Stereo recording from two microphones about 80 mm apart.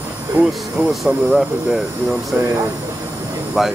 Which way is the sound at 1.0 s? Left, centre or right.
Centre.